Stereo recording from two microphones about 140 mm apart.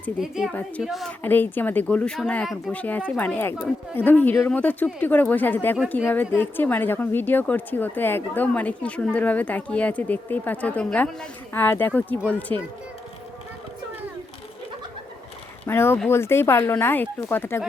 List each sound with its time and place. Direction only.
0.2 s a woman's voice: 5° right (ahead or behind)
1.2 s speech: 15° left (ahead or behind)
15.6 s speech: 15° left (ahead or behind)